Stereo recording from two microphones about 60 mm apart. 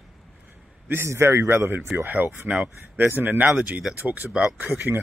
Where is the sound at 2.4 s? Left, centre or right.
Centre.